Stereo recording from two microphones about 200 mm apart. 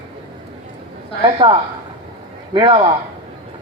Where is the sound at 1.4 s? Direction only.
30° right (ahead or behind).